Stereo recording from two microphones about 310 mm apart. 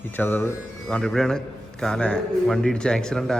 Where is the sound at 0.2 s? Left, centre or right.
Centre.